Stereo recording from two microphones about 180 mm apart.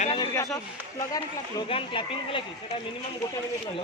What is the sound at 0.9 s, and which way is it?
Speech, 20° left (ahead or behind).